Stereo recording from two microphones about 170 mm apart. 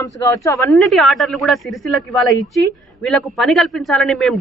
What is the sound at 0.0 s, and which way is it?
Speech, 20° left (ahead or behind).